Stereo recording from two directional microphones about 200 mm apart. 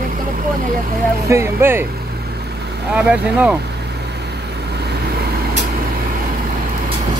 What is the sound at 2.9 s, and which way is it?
Speech, 5° right (ahead or behind).